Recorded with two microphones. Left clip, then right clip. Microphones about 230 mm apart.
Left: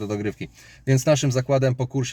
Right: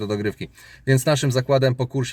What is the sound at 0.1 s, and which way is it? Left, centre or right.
Speech, centre.